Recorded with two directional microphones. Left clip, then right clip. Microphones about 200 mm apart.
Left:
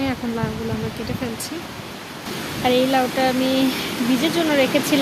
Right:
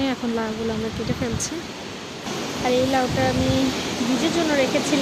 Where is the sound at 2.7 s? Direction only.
15° left (ahead or behind).